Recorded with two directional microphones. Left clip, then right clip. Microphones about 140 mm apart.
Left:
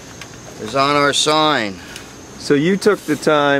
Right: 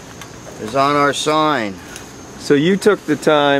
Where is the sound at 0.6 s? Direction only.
15° left (ahead or behind).